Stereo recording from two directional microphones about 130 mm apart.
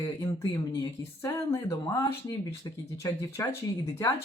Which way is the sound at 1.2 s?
25° left (ahead or behind).